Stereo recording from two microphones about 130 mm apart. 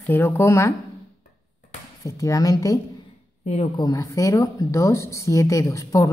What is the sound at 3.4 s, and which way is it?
Speech, 60° left (ahead or behind).